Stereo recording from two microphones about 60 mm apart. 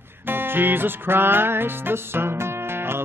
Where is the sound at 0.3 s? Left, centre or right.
Right.